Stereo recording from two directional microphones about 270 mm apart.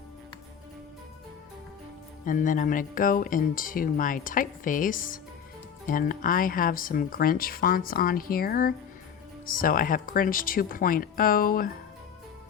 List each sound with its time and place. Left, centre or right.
2.2 s speech: left